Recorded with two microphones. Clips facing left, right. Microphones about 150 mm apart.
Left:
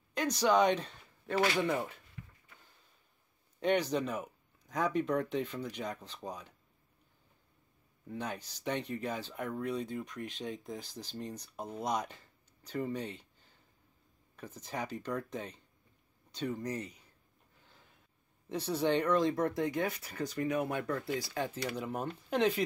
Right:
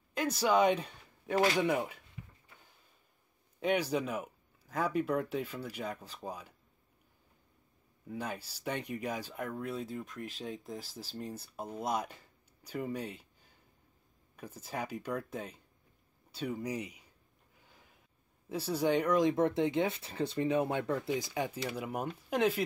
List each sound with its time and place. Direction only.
0.1 s speech: 5° right (ahead or behind)
2.2 s a sound: 10° right (ahead or behind)
3.5 s speech: 5° right (ahead or behind)
8.1 s speech: 5° right (ahead or behind)
17.6 s a sound: 10° right (ahead or behind)
18.5 s speech: 10° right (ahead or behind)